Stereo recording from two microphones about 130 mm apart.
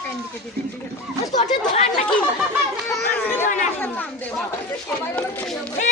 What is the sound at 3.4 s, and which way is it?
Chatter, 70° left (ahead or behind).